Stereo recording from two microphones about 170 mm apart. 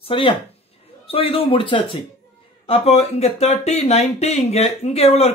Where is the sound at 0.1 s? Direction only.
30° left (ahead or behind).